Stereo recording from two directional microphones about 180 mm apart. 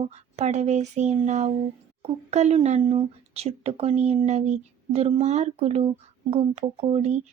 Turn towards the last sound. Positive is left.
turn(degrees=-40)  # may be behind; listen again after turning